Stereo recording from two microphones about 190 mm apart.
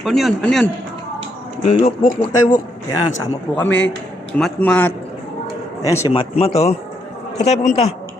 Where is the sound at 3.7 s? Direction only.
80° left.